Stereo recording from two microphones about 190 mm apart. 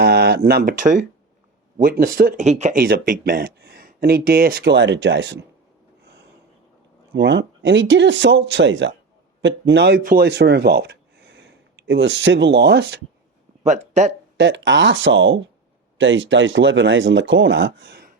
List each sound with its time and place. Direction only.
0.0 s speech: 55° right (ahead or behind); by 2.8 s 40° right (ahead or behind)
2.8 s speech: 50° right (ahead or behind)
7.1 s speech: 70° right (ahead or behind)
13.7 s speech: 40° right (ahead or behind)
14.3 s speech: 70° right (ahead or behind)